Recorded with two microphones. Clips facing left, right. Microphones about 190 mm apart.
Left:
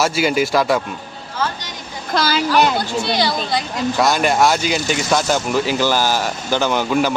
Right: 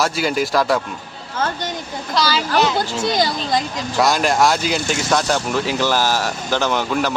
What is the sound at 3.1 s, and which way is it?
Speech, 40° right (ahead or behind).